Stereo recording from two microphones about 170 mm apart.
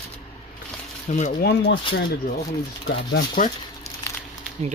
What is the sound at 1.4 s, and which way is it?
Speech, 65° left (ahead or behind).